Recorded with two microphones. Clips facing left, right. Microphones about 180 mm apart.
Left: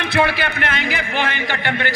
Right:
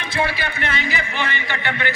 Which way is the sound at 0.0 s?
65° left (ahead or behind).